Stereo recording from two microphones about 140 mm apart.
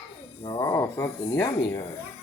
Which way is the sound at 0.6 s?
25° left (ahead or behind).